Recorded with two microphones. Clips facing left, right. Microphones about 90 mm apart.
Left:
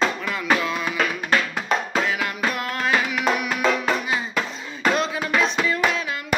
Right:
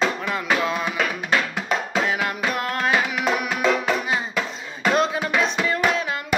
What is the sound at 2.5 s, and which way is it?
Music, 40° right (ahead or behind).